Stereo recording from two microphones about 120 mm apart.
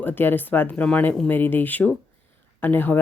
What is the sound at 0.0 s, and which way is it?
Speech, 15° left (ahead or behind).